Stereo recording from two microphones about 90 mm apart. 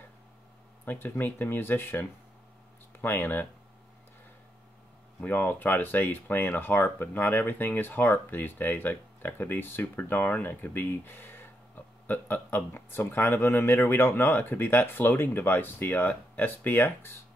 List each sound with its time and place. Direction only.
0.8 s speech: 25° left (ahead or behind)
5.2 s speech: 20° left (ahead or behind)